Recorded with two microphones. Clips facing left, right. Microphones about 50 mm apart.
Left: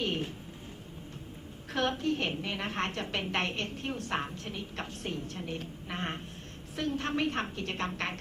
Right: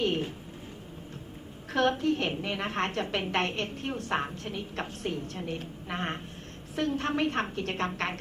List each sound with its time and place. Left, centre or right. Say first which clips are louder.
0.0 s a sound: right 4 dB; centre
1.8 s a woman's voice: right 4 dB; centre
7.9 s a woman's voice: right 3 dB; right